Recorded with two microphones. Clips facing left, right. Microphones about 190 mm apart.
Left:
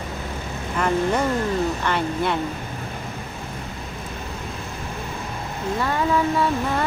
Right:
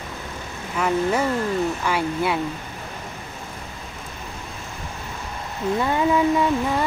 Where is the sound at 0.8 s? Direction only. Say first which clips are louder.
Even; 5° right (ahead or behind).